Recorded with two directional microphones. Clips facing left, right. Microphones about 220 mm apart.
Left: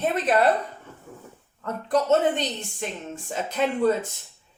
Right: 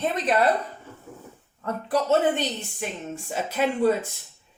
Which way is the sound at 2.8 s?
10° right (ahead or behind).